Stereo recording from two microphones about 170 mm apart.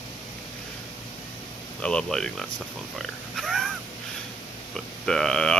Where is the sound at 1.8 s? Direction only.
5° left (ahead or behind).